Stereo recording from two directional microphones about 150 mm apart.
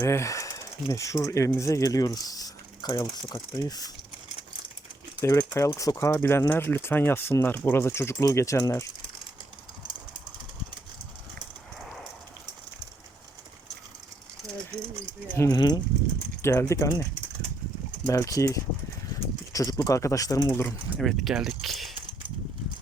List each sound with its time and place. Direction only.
0.0 s speech: 20° left (ahead or behind)
5.2 s speech: 20° left (ahead or behind)
14.8 s a sound: 20° right (ahead or behind)
15.4 s speech: 25° left (ahead or behind)
20.7 s speech: centre (ahead or behind)